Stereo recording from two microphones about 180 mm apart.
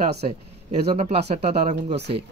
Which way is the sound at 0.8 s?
35° right (ahead or behind).